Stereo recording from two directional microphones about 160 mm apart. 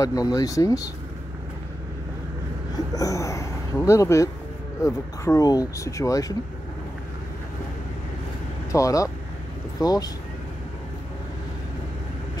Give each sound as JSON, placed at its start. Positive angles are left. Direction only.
{"t": 0.0, "sound": "speech", "side_deg": 20}
{"t": 3.0, "sound": "speech", "side_deg": 20}
{"t": 8.7, "sound": "speech", "side_deg": 20}